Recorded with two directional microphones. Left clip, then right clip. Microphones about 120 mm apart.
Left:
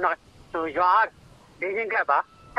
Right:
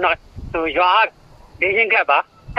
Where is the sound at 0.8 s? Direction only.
10° right (ahead or behind).